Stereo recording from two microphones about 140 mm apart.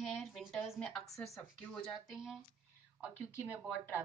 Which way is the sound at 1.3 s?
5° left (ahead or behind).